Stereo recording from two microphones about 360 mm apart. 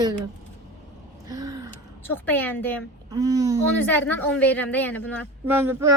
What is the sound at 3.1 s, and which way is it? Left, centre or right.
Speech, centre.